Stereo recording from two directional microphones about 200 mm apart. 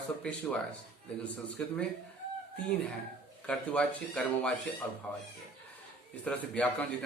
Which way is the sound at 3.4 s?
5° left (ahead or behind).